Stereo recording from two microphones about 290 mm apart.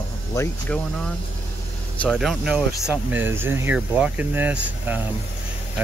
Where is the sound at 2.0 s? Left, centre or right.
Centre.